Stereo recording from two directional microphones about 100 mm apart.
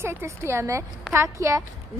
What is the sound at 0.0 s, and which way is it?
A woman's voice, 25° right (ahead or behind).